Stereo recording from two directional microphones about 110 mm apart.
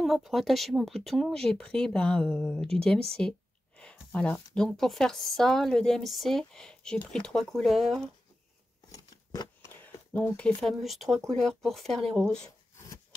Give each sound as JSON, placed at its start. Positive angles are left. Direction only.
{"t": 0.0, "sound": "speech", "side_deg": 0}
{"t": 8.9, "sound": "scissors", "side_deg": 35}
{"t": 9.7, "sound": "speech", "side_deg": 20}